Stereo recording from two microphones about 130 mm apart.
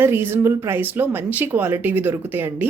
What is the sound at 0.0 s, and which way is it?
A woman's voice, 15° right (ahead or behind).